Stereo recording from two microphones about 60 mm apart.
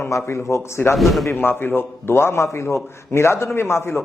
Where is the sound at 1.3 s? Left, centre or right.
Left.